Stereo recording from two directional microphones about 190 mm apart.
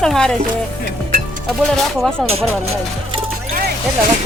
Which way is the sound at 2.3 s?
30° right (ahead or behind).